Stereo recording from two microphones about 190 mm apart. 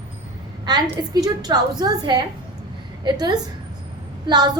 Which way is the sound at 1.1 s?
20° right (ahead or behind).